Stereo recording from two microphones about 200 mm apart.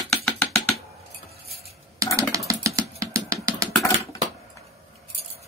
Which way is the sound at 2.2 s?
15° right (ahead or behind).